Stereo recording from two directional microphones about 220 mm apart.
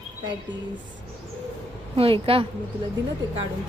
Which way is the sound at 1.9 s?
25° right (ahead or behind).